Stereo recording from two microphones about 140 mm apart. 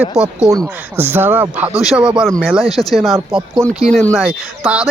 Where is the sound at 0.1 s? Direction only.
5° right (ahead or behind).